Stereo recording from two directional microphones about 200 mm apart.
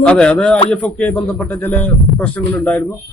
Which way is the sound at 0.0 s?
5° left (ahead or behind).